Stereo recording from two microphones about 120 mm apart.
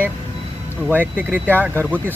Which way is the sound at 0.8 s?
15° right (ahead or behind).